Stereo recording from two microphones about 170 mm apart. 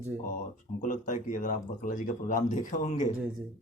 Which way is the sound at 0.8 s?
45° left (ahead or behind).